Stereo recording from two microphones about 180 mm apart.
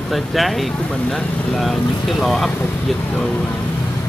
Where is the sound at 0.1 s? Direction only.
Centre (ahead or behind).